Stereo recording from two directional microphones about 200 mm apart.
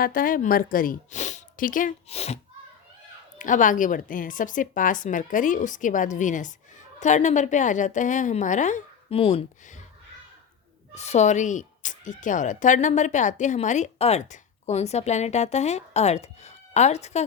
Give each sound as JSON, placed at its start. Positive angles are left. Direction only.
{"t": 0.0, "sound": "speech", "side_deg": 45}
{"t": 10.9, "sound": "speech", "side_deg": 35}